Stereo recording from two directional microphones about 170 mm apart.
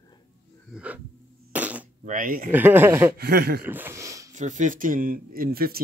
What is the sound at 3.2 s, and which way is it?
Speech, 65° right (ahead or behind).